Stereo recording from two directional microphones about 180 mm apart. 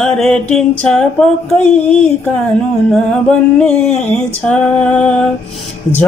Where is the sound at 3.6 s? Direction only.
5° left (ahead or behind).